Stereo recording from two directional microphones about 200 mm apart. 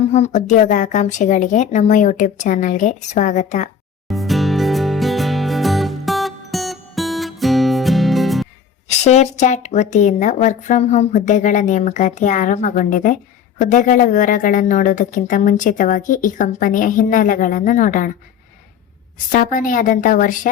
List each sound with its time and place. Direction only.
0.1 s speech: 35° left (ahead or behind)
4.1 s music: centre (ahead or behind)
8.9 s speech: 35° left (ahead or behind)
19.3 s speech: 40° left (ahead or behind)